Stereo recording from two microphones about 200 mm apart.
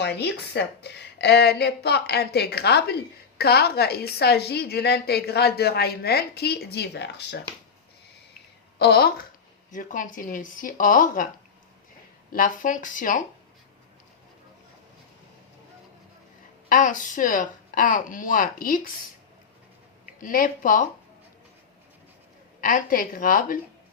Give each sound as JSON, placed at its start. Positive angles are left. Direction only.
{"t": 0.0, "sound": "a woman's voice", "side_deg": 55}
{"t": 8.8, "sound": "a woman's voice", "side_deg": 55}
{"t": 12.3, "sound": "speech", "side_deg": 40}
{"t": 16.6, "sound": "speech", "side_deg": 40}
{"t": 20.2, "sound": "a woman's voice", "side_deg": 45}
{"t": 22.6, "sound": "a woman's voice", "side_deg": 45}